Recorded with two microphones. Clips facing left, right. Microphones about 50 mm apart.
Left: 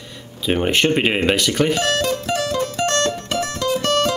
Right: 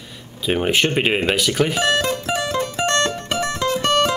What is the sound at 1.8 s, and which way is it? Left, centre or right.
Music, centre.